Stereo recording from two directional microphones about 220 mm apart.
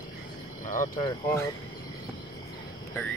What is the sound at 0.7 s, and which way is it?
Speech, 40° left (ahead or behind).